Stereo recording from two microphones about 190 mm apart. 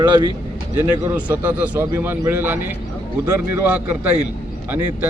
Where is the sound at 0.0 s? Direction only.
25° right (ahead or behind).